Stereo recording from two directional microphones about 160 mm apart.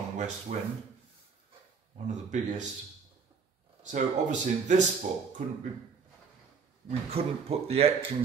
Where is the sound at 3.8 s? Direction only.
50° right (ahead or behind).